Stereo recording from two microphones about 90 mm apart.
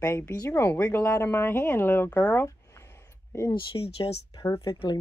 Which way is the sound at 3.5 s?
80° left.